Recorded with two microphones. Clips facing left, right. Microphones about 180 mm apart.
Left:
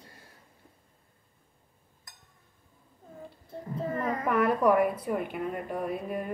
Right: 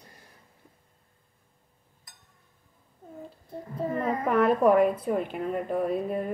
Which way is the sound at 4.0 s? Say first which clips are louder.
Right 3 dB; 25° right (ahead or behind).